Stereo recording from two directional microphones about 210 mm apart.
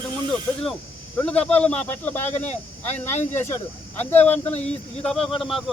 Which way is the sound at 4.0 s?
10° left (ahead or behind).